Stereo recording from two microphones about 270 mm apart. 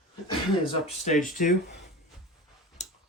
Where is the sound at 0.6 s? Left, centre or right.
Left.